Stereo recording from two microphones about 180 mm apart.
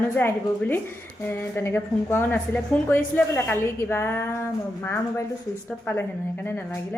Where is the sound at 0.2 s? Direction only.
10° left (ahead or behind).